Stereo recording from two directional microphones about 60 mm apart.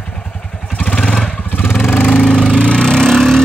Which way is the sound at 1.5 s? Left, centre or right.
Left.